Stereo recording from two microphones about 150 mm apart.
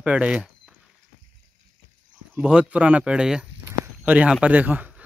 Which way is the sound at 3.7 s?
10° right (ahead or behind).